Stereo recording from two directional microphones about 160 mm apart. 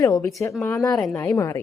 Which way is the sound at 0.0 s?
20° left (ahead or behind).